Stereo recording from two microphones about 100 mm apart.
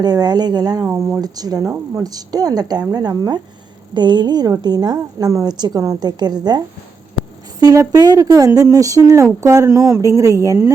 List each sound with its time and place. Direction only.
0.0 s a woman's voice: 40° right (ahead or behind)
7.6 s speech: 40° right (ahead or behind)